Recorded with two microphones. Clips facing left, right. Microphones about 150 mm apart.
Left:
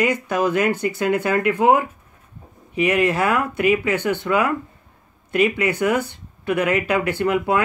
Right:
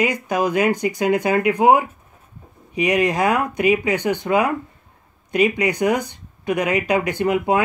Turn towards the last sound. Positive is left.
turn(degrees=-15)  # may be behind; listen again after turning